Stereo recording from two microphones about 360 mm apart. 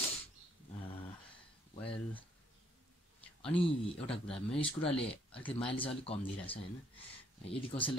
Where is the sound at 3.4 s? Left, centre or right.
Centre.